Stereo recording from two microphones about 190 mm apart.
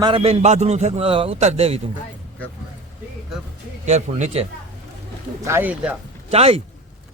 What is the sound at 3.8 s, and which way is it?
Speech, 35° right (ahead or behind).